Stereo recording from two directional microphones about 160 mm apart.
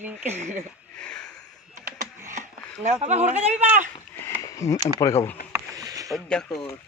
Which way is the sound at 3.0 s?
45° right (ahead or behind).